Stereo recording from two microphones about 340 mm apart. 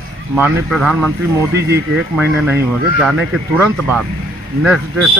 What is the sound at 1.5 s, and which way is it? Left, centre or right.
Speech, right.